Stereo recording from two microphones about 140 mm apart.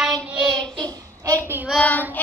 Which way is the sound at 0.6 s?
30° right (ahead or behind).